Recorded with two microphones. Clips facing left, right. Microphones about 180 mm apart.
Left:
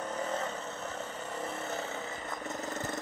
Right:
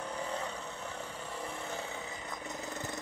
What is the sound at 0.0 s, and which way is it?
Vehicle, 10° right (ahead or behind).